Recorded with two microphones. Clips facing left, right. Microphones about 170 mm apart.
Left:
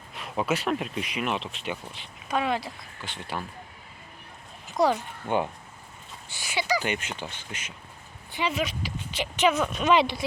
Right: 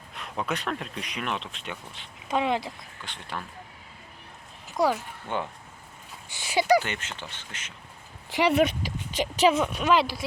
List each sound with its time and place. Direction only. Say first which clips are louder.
0.1 s speech: left 4 dB; centre (ahead or behind)
2.2 s speech: right 1 dB; 20° right (ahead or behind)
3.0 s speech: left 3 dB; 5° left (ahead or behind)
4.8 s speech: left 1 dB; 5° right (ahead or behind)
5.3 s speech: left 5 dB; 15° left (ahead or behind)
6.6 s speech: right 6 dB; 55° right (ahead or behind)
6.8 s speech: left 5 dB; 15° left (ahead or behind)
8.3 s speech: right 7 dB; 75° right (ahead or behind)
8.8 s speech: right 3 dB; 40° right (ahead or behind)
9.7 s speech: left 1 dB; 5° right (ahead or behind)